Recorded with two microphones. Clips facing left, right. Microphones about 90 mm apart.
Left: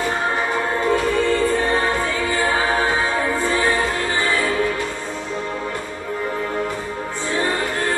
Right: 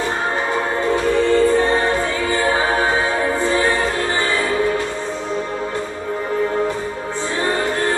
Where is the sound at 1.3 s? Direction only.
20° right (ahead or behind).